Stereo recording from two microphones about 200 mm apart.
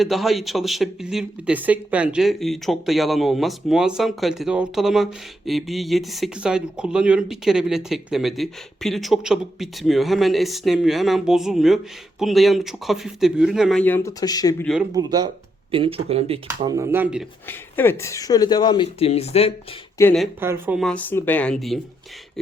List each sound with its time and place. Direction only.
0.0 s speech: centre (ahead or behind); by 14.5 s 20° left (ahead or behind)
14.6 s speech: centre (ahead or behind)
14.9 s speech: 20° right (ahead or behind)
16.7 s speech: 10° right (ahead or behind)
17.4 s speech: 10° left (ahead or behind); by 19.5 s 30° left (ahead or behind)
20.0 s speech: 15° left (ahead or behind)
20.4 s speech: 10° right (ahead or behind)